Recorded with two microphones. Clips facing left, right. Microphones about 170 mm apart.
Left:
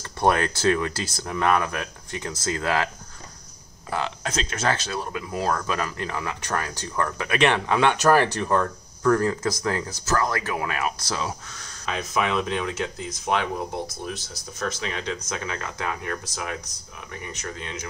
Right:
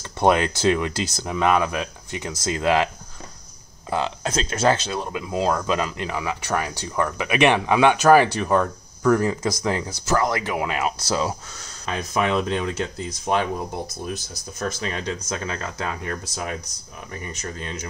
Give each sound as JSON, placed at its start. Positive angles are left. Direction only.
{"t": 0.2, "sound": "speech", "side_deg": -20}
{"t": 3.9, "sound": "speech", "side_deg": -30}
{"t": 14.6, "sound": "speech", "side_deg": -40}